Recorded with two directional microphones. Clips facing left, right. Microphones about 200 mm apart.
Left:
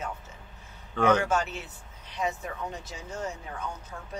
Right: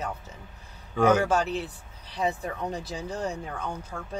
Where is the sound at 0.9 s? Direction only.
10° right (ahead or behind).